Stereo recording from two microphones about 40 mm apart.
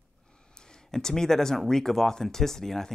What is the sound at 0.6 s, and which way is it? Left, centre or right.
Speech, centre.